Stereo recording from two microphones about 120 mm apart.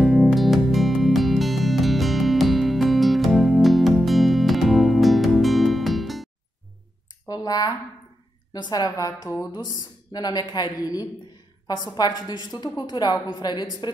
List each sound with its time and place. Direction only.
0.0 s music: centre (ahead or behind)
7.2 s a sound: 30° left (ahead or behind)
8.5 s a woman's voice: 35° left (ahead or behind)